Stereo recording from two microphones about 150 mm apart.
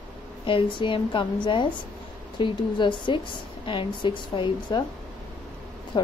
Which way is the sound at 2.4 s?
30° left (ahead or behind).